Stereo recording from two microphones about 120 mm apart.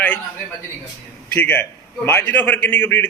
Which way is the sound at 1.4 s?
15° left (ahead or behind).